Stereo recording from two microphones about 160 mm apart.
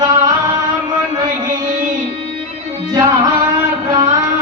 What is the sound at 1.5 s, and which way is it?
Music, 55° right (ahead or behind).